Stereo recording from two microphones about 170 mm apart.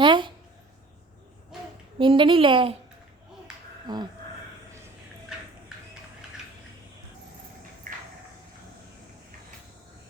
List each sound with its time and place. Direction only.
0.0 s a sound: 30° right (ahead or behind)
2.0 s speech: 30° right (ahead or behind)
3.9 s speech: 25° right (ahead or behind)